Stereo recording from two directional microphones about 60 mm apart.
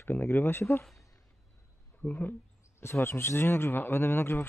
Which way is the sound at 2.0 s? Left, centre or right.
Left.